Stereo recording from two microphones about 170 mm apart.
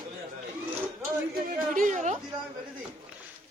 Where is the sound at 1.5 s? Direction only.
50° right (ahead or behind).